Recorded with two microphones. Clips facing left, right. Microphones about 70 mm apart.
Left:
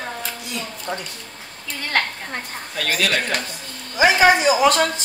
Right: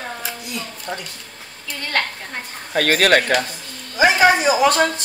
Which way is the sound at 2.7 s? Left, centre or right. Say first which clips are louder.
Right 7 dB; right.